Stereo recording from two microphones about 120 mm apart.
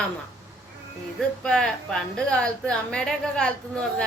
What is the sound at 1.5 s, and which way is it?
A woman's voice, 5° left (ahead or behind).